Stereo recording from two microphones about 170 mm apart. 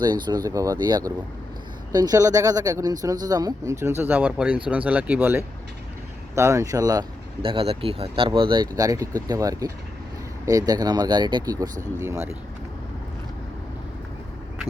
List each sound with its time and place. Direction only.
0.0 s speech: 25° right (ahead or behind)
7.4 s speech: 35° right (ahead or behind); by 12.2 s 20° right (ahead or behind)